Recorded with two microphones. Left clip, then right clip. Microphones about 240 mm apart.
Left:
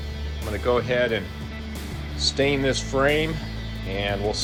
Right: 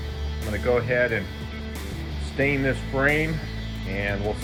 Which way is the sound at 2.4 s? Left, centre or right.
Centre.